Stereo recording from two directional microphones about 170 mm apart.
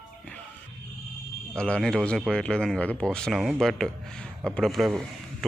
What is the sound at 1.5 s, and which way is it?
Speech, 5° left (ahead or behind).